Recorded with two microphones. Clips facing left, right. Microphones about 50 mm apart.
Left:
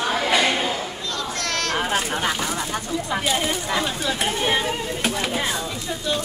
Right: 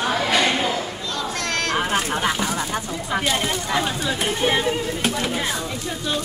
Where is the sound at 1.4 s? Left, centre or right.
Centre.